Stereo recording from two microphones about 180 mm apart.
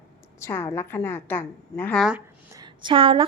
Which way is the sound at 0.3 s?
15° left (ahead or behind).